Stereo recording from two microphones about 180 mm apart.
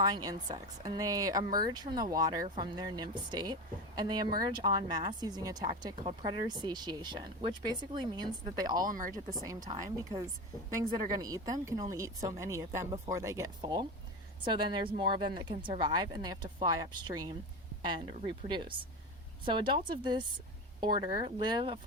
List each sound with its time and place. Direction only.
0.0 s speech: 20° right (ahead or behind)
8.9 s speech: 50° right (ahead or behind)
9.1 s a woman's voice: 20° right (ahead or behind)